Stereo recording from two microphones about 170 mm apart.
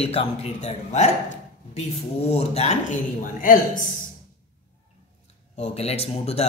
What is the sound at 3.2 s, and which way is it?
Speech, 55° left (ahead or behind).